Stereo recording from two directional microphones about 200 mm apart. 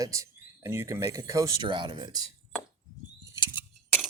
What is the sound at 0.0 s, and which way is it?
Speech, 15° right (ahead or behind).